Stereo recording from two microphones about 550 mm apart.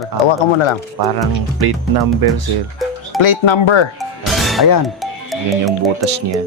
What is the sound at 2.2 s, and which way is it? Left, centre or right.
Speech, right.